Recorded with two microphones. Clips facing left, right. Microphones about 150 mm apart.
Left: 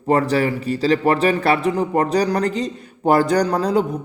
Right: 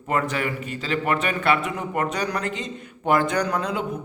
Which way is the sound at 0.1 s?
35° left (ahead or behind).